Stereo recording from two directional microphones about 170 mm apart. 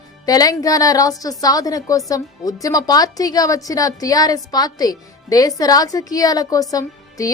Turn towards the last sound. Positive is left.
turn(degrees=20)  # may be behind; listen again after turning